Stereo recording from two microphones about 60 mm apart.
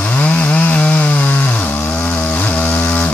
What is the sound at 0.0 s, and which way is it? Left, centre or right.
Chainsaw, left.